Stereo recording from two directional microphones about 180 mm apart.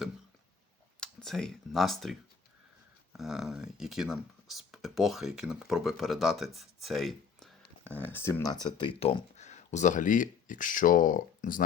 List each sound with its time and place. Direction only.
0.9 s speech: 5° left (ahead or behind)
8.6 s speech: 30° left (ahead or behind); by 11.6 s 50° left (ahead or behind)